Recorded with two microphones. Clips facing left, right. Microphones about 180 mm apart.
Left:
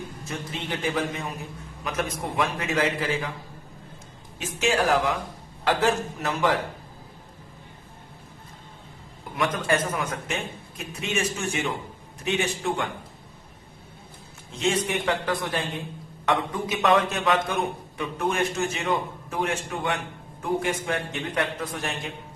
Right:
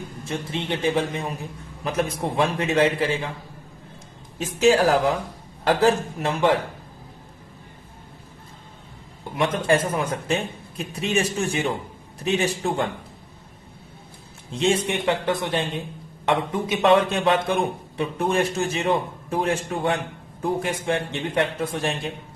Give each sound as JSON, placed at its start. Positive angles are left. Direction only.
{"t": 0.3, "sound": "a man's voice", "side_deg": -25}
{"t": 4.4, "sound": "a man's voice", "side_deg": -35}
{"t": 9.3, "sound": "a man's voice", "side_deg": -25}
{"t": 14.5, "sound": "a man's voice", "side_deg": -30}